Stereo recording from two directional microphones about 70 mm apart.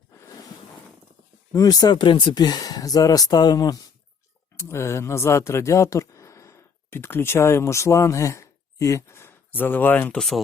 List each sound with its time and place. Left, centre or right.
1.5 s speech: left
4.6 s speech: left
7.0 s speech: left
9.5 s speech: left
10.2 s speech: centre